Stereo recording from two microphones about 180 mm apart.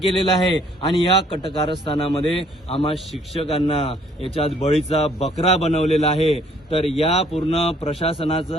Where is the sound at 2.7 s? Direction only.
30° left (ahead or behind).